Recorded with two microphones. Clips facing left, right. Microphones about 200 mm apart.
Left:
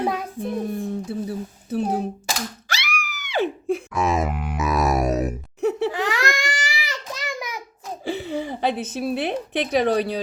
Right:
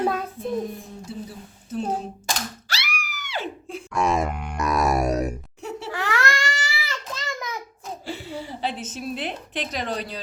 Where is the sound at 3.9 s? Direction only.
Centre (ahead or behind).